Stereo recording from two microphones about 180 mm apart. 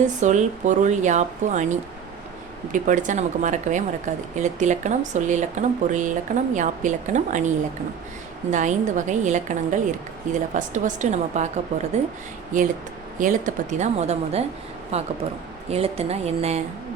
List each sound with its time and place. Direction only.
0.0 s a woman's voice: 40° right (ahead or behind)